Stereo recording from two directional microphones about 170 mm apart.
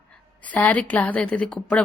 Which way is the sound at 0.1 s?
10° left (ahead or behind).